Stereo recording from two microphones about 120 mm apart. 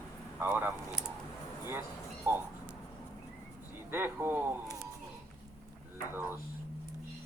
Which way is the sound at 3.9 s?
20° right (ahead or behind).